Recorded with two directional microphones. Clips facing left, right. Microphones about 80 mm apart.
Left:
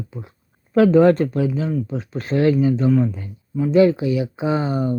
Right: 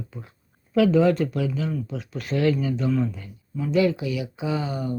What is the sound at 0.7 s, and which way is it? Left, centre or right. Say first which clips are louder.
Speech: left 5 dB; left.